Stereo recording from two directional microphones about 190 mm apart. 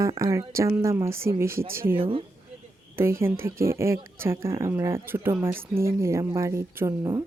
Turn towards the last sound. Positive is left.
turn(degrees=-15)  # may be behind; listen again after turning